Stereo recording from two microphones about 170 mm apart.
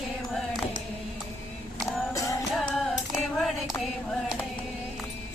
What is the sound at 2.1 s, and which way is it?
Music, 20° left (ahead or behind).